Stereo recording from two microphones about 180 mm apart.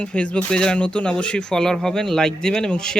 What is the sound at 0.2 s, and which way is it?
Speech, 5° left (ahead or behind).